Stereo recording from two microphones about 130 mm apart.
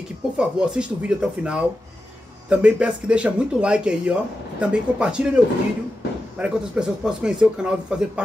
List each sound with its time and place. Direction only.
0.4 s speech: 5° right (ahead or behind)